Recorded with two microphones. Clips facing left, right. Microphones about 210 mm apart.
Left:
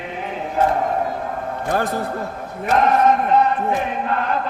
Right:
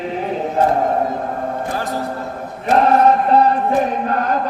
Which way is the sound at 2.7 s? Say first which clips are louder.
Right 3 dB; 35° right (ahead or behind).